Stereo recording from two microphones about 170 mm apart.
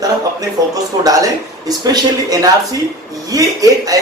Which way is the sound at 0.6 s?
20° right (ahead or behind).